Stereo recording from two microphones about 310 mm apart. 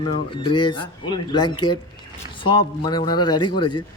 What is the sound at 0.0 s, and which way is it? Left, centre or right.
Speech, centre.